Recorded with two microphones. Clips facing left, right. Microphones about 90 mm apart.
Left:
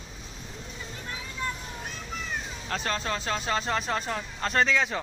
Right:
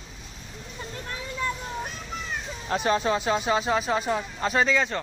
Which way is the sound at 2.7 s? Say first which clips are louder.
Right 7 dB; 15° right (ahead or behind).